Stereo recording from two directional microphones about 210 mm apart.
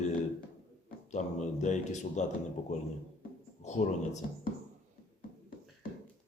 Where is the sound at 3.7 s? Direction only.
35° left (ahead or behind).